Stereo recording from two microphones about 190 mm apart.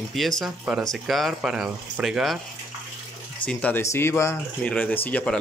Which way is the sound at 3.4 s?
10° left (ahead or behind).